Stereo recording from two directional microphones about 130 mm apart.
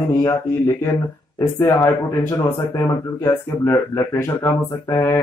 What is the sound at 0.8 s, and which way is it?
Speech, 20° left (ahead or behind).